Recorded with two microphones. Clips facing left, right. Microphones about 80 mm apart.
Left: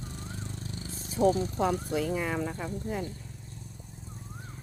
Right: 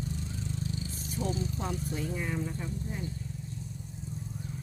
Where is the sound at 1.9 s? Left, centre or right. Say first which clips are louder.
Left 5 dB; left.